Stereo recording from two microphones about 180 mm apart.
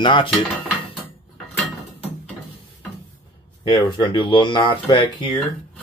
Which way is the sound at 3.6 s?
25° left (ahead or behind).